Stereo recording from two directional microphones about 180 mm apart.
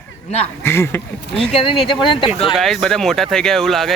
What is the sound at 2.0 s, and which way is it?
Speech, 30° left (ahead or behind).